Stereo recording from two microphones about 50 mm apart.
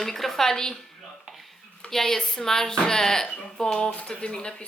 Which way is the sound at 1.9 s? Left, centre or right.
Centre.